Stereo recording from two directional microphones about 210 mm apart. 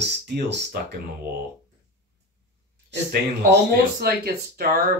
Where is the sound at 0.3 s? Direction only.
55° right (ahead or behind).